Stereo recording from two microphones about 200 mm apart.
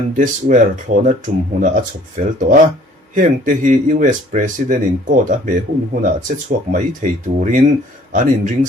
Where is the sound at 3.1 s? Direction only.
40° right (ahead or behind).